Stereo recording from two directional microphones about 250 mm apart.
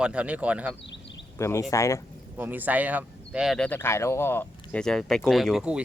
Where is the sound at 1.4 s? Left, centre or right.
Centre.